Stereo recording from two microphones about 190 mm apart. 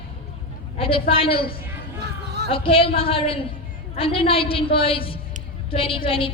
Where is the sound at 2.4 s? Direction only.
30° left (ahead or behind).